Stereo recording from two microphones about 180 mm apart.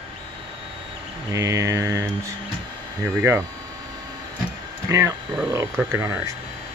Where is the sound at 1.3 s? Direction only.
20° right (ahead or behind).